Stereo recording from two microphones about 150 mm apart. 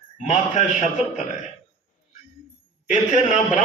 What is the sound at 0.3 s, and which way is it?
Speech, 50° left (ahead or behind).